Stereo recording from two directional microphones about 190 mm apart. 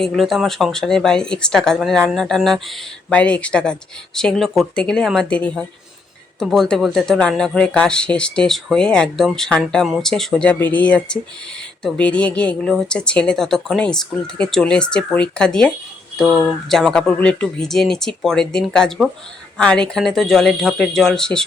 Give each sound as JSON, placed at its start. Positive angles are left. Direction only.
{"t": 0.0, "sound": "speech", "side_deg": 0}